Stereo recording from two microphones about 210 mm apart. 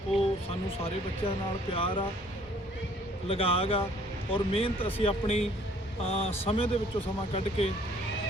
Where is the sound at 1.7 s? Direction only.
25° left (ahead or behind).